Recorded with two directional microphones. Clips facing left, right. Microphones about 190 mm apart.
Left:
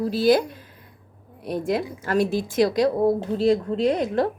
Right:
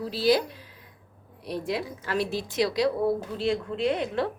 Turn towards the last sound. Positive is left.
turn(degrees=40)  # may be behind; listen again after turning